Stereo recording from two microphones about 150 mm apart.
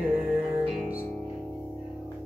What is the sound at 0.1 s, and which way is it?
Music, 5° right (ahead or behind).